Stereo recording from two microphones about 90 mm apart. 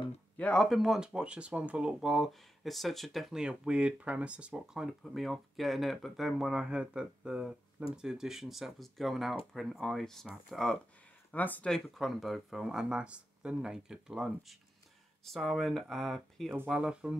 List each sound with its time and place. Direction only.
0.4 s speech: 10° left (ahead or behind)
0.7 s speech: centre (ahead or behind)
11.3 s speech: 20° left (ahead or behind)
11.7 s speech: centre (ahead or behind)